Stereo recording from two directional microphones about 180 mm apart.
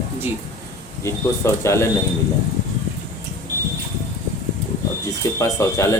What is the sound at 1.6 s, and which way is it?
Speech, 15° left (ahead or behind).